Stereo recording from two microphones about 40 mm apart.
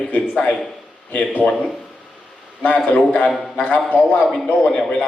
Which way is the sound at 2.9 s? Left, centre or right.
Left.